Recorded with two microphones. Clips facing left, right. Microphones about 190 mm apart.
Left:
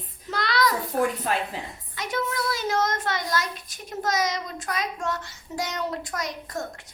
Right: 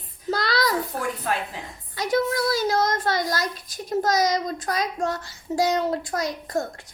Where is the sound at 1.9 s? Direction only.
35° right (ahead or behind).